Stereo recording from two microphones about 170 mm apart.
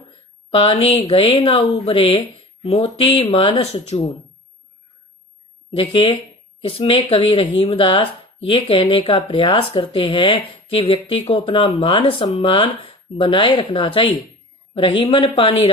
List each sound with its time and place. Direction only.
0.5 s speech: 35° left (ahead or behind)
5.7 s speech: 35° left (ahead or behind)